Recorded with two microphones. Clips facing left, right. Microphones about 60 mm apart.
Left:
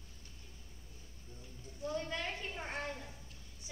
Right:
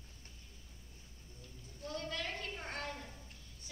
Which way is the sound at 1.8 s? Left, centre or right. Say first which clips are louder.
Left 3 dB; centre.